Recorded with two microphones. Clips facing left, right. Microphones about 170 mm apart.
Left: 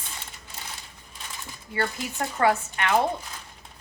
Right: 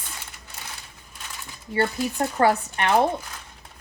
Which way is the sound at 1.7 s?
30° right (ahead or behind).